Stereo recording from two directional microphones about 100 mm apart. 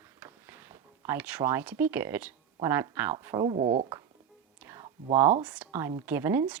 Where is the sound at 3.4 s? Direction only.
55° right (ahead or behind).